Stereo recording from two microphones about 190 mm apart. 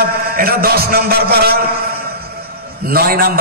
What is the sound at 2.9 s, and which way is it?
Speech, 50° right (ahead or behind).